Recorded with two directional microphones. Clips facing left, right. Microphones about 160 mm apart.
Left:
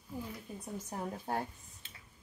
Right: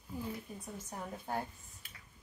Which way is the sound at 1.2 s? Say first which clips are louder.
Left 2 dB; 30° left (ahead or behind).